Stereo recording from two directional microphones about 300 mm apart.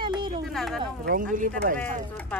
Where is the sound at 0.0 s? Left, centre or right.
Centre.